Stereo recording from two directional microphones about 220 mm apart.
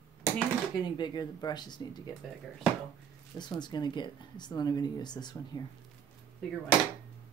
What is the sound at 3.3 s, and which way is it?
Speech, 20° left (ahead or behind).